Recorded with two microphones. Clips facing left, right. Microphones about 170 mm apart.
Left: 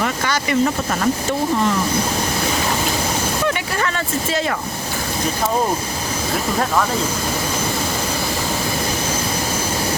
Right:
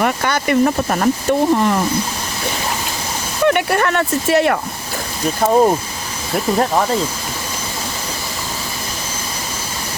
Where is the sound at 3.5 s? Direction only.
60° right (ahead or behind).